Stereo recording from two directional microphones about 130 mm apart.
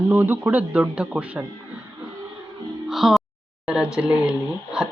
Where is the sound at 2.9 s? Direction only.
Centre (ahead or behind).